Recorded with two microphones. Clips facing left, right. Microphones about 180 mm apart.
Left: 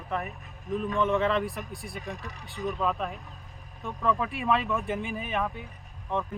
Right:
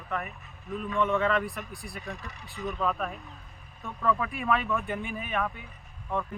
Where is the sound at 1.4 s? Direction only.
Centre (ahead or behind).